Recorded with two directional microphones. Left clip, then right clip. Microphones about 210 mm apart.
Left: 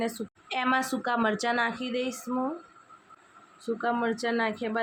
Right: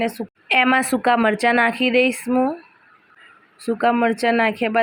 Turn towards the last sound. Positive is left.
turn(degrees=-25)  # may be behind; listen again after turning